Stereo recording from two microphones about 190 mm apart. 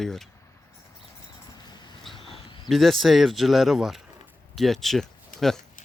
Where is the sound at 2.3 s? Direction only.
25° left (ahead or behind).